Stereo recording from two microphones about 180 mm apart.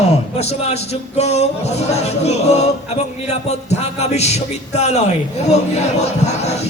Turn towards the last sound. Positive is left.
turn(degrees=40)  # may be behind; listen again after turning